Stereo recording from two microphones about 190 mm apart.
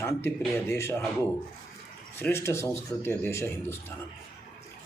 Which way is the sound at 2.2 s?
10° left (ahead or behind).